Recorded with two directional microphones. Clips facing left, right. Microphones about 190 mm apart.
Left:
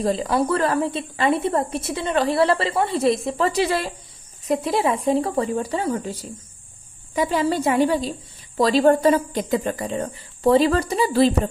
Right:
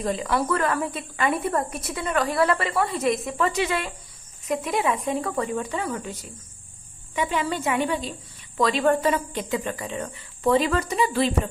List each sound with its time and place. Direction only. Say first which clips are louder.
0.0 s a woman's voice: left 4 dB; 30° left (ahead or behind)